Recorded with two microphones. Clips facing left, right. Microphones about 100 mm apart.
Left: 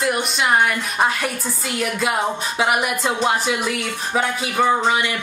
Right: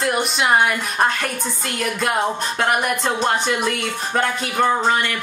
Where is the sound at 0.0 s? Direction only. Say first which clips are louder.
Right 1 dB; centre (ahead or behind).